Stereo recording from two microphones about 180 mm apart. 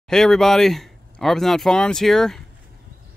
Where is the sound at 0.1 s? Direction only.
Centre (ahead or behind).